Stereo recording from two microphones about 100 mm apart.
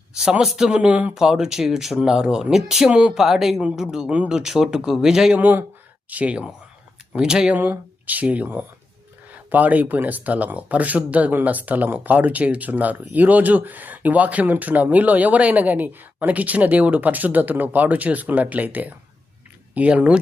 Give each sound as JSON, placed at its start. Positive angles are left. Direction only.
{"t": 0.1, "sound": "speech", "side_deg": -10}
{"t": 5.4, "sound": "speech", "side_deg": -20}